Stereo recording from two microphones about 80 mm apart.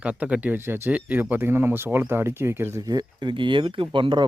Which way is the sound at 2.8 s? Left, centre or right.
Right.